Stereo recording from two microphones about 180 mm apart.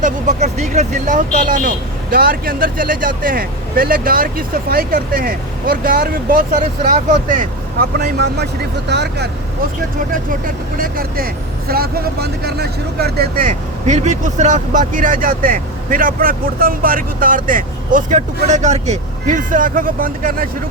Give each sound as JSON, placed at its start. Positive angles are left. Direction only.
{"t": 0.0, "sound": "speech", "side_deg": -40}
{"t": 1.5, "sound": "speech", "side_deg": -55}
{"t": 10.2, "sound": "speech", "side_deg": -50}